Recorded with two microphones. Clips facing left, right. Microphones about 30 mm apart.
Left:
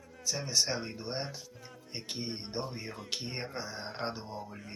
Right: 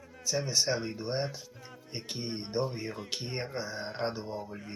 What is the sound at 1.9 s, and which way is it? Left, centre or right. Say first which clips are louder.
Music: right 1 dB; left.